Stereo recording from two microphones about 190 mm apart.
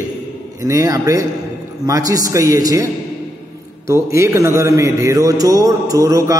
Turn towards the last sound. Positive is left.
turn(degrees=-20)  # may be behind; listen again after turning